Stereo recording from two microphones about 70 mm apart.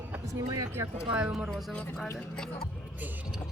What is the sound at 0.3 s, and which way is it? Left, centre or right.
Speech, right.